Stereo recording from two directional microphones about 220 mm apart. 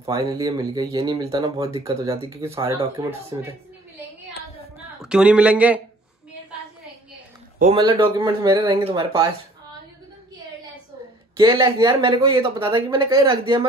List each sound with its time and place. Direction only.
0.0 s speech: 15° right (ahead or behind)
5.0 s speech: 5° right (ahead or behind)
7.7 s speech: 20° right (ahead or behind)
11.3 s speech: 20° right (ahead or behind)